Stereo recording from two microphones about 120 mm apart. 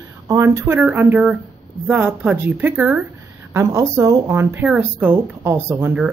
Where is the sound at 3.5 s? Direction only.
25° right (ahead or behind).